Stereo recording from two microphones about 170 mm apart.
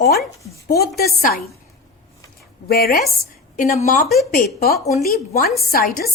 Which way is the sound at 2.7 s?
65° left (ahead or behind).